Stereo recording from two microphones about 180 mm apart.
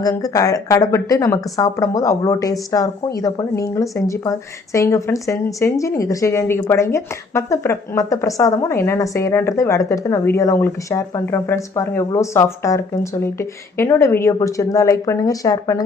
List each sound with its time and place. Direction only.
0.0 s speech: 20° left (ahead or behind)